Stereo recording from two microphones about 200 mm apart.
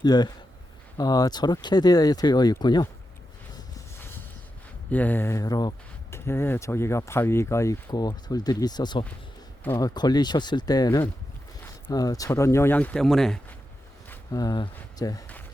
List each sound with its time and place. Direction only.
0.0 s speech: 20° left (ahead or behind)
4.9 s speech: 10° left (ahead or behind)
14.1 s speech: 20° left (ahead or behind)